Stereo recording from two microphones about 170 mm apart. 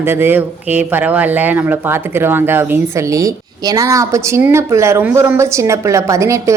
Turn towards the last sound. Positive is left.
turn(degrees=-15)  # may be behind; listen again after turning